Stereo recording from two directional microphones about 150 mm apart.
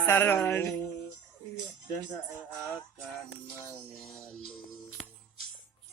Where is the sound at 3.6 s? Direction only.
15° left (ahead or behind).